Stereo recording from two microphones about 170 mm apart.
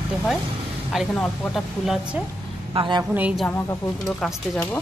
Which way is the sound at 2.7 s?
30° right (ahead or behind).